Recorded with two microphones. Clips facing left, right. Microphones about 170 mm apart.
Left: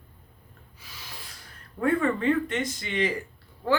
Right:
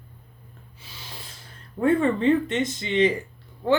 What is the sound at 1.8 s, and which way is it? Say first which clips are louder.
Speech: right 4 dB; 25° right (ahead or behind).